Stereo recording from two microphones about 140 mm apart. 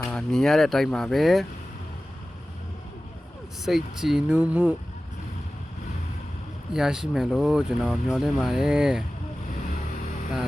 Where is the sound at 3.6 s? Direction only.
Centre (ahead or behind).